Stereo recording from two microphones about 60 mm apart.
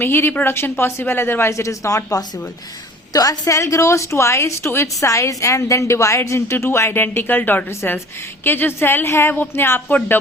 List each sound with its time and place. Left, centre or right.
0.0 s a woman's voice: left
3.1 s a woman's voice: left
3.6 s a woman's voice: left
4.9 s a woman's voice: left